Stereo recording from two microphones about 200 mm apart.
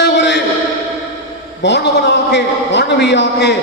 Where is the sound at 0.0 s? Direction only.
60° left (ahead or behind).